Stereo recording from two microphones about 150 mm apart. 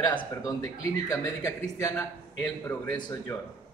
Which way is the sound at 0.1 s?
25° left (ahead or behind).